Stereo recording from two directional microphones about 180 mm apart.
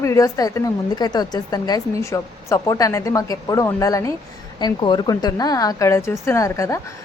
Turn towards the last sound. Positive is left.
turn(degrees=15)  # may be behind; listen again after turning